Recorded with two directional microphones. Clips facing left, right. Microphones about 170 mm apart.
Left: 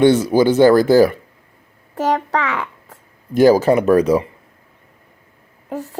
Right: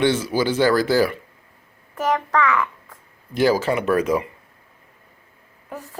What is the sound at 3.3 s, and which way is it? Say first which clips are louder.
Speech: left 7 dB; 45° left (ahead or behind).